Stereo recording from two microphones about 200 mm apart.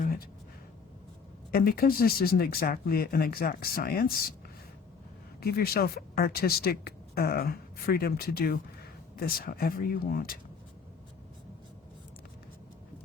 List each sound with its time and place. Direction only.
0.0 s a sound: 45° left (ahead or behind)
1.5 s speech: 50° left (ahead or behind)
5.4 s speech: 50° left (ahead or behind)